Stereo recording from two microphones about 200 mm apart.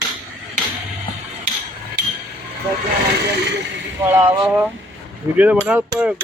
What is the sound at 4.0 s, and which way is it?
A man's voice, 10° right (ahead or behind).